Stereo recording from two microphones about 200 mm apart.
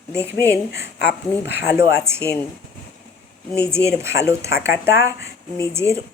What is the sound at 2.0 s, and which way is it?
Speech, 15° right (ahead or behind).